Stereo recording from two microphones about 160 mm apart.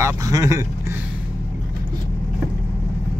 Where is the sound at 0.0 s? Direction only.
20° right (ahead or behind).